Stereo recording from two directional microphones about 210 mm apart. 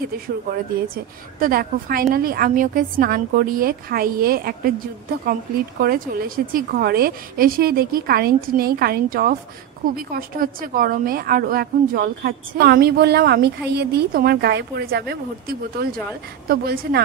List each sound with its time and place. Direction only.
0.9 s a woman's voice: 45° right (ahead or behind)
5.8 s a woman's voice: 45° right (ahead or behind)